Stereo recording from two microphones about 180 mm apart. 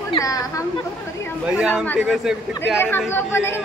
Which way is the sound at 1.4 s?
5° right (ahead or behind).